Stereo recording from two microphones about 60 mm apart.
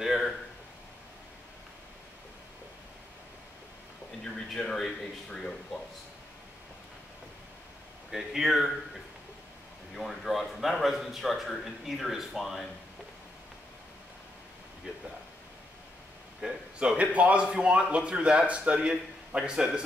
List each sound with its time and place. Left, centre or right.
0.0 s a sound: centre
4.2 s speech: centre
8.1 s a man's voice: centre
9.9 s a man's voice: centre
16.3 s a man's voice: centre